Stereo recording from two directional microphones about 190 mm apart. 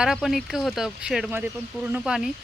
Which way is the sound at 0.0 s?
Centre (ahead or behind).